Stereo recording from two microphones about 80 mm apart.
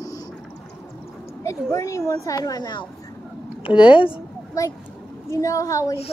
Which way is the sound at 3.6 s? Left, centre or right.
Left.